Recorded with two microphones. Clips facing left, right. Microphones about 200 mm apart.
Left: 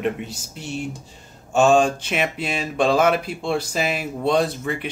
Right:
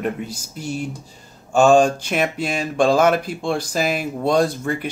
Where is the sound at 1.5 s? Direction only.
Centre (ahead or behind).